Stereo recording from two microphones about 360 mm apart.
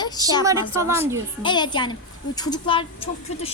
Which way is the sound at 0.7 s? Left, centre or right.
Centre.